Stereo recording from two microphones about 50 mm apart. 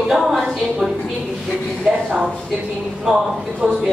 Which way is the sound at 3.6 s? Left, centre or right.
Right.